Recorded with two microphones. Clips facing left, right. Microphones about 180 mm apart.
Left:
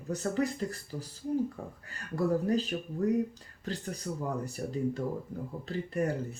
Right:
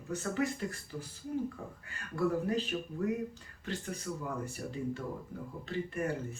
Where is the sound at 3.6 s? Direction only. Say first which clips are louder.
Left 2 dB; 35° left (ahead or behind).